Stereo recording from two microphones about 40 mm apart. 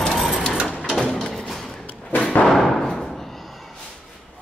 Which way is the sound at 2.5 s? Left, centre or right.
Centre.